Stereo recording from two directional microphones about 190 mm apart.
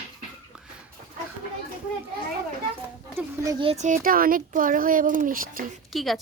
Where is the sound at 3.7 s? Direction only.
40° right (ahead or behind).